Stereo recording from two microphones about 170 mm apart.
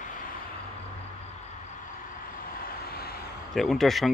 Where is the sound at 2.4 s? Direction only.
60° left (ahead or behind).